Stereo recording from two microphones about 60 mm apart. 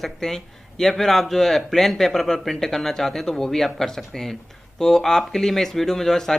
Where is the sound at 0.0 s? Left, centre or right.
Centre.